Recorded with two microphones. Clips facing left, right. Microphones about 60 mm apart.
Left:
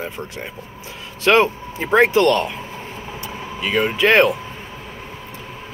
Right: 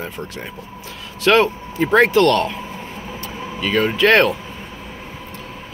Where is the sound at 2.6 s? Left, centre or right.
Centre.